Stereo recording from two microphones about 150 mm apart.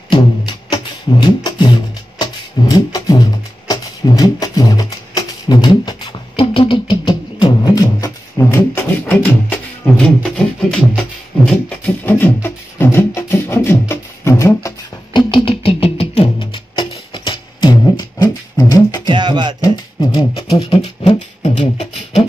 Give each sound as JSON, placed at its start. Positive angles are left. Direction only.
{"t": 0.1, "sound": "music", "side_deg": 30}
{"t": 15.1, "sound": "music", "side_deg": 35}
{"t": 19.0, "sound": "music", "side_deg": -30}
{"t": 19.6, "sound": "beatboxing", "side_deg": 25}